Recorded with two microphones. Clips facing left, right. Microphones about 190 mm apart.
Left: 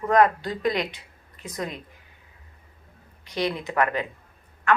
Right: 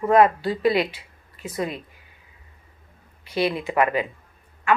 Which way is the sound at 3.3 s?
5° right (ahead or behind).